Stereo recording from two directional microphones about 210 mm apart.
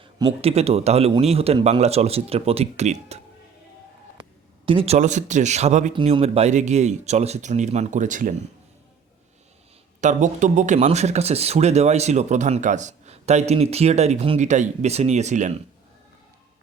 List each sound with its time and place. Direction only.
0.0 s a man's voice: 20° right (ahead or behind)
4.2 s speech: 25° right (ahead or behind)
10.0 s speech: 35° right (ahead or behind)